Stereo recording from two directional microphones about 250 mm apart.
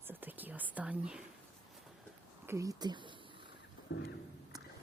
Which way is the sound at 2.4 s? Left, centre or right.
Centre.